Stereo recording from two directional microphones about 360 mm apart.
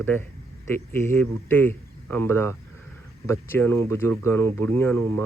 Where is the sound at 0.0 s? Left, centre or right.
Centre.